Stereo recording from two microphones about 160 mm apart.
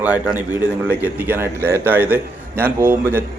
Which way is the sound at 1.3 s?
15° right (ahead or behind).